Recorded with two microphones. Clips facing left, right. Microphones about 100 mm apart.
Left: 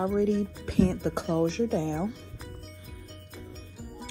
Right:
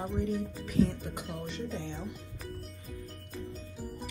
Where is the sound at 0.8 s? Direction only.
80° left.